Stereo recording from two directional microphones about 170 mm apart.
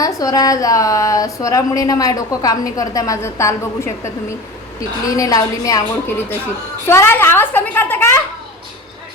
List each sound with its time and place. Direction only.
0.0 s a woman's voice: 20° left (ahead or behind)